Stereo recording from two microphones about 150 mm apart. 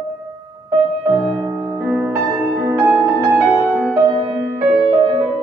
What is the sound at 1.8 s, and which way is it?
Music, 10° right (ahead or behind).